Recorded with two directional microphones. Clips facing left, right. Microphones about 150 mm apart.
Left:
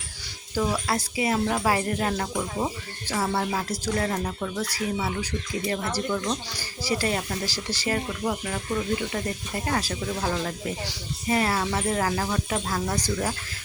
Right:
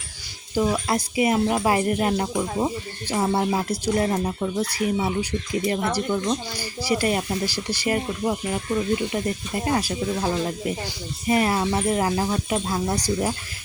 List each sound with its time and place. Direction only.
0.5 s speech: 15° right (ahead or behind)